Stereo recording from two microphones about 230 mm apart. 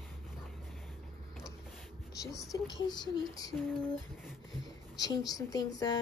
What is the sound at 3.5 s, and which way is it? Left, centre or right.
Speech, centre.